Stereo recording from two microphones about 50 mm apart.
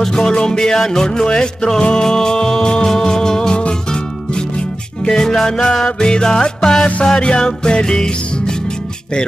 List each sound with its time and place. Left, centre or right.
0.0 s music: centre